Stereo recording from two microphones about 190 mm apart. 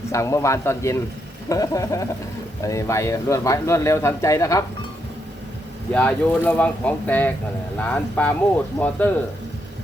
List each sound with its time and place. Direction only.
0.1 s speech: 15° left (ahead or behind)
5.9 s speech: 5° left (ahead or behind)